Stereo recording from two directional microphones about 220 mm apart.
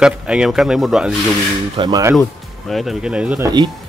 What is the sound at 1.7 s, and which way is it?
Speech, 20° right (ahead or behind).